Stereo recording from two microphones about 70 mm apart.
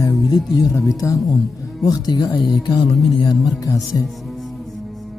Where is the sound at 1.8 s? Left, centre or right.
Left.